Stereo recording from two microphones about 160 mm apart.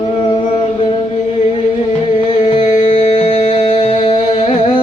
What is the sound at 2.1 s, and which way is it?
Music, 40° left (ahead or behind).